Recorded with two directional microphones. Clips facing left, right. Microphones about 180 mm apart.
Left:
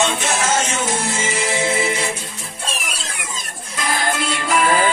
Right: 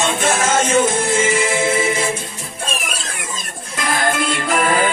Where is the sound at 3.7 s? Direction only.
50° right (ahead or behind).